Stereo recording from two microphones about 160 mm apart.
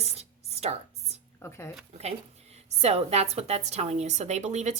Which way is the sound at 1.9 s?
40° right (ahead or behind).